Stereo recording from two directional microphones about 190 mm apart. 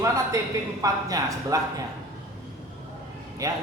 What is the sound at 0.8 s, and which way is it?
Speech, 20° right (ahead or behind).